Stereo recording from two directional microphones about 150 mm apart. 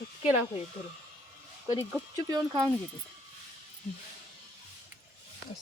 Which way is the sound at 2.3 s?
25° right (ahead or behind).